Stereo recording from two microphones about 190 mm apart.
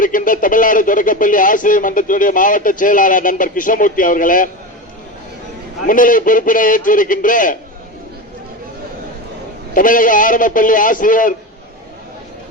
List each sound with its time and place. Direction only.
0.0 s a man's voice: 45° left (ahead or behind)
5.9 s a man's voice: 45° left (ahead or behind)
9.7 s a man's voice: 45° left (ahead or behind)